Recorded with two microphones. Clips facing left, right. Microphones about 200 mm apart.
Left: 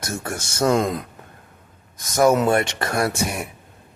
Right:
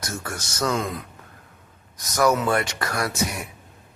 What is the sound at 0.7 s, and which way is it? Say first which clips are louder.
Speech: left 8 dB; 40° left (ahead or behind).